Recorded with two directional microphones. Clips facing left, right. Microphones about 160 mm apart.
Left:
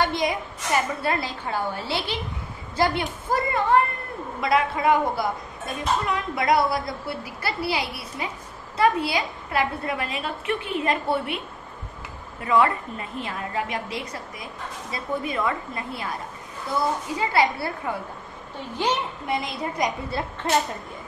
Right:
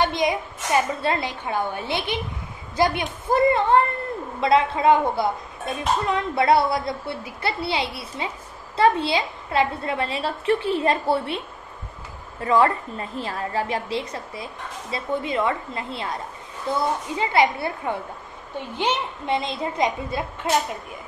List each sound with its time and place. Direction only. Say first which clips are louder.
0.0 s a woman's voice: right 2 dB; 20° right (ahead or behind)
12.4 s a woman's voice: right 2 dB; 35° right (ahead or behind)
17.2 s a woman's voice: right 2 dB; 20° right (ahead or behind)